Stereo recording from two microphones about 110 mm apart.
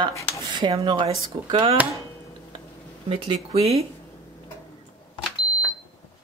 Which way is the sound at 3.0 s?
55° right (ahead or behind).